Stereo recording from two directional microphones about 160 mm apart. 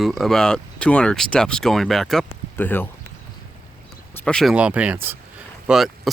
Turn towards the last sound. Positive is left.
turn(degrees=0)  # may be behind; listen again after turning